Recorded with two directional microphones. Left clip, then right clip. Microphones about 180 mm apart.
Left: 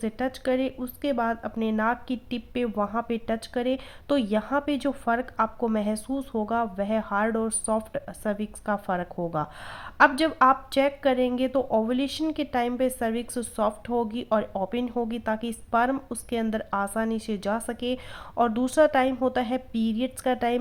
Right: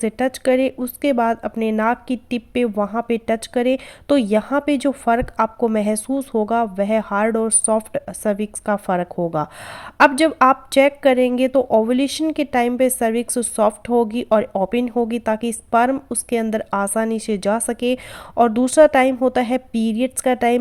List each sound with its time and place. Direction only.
0.0 s a woman's voice: 35° right (ahead or behind)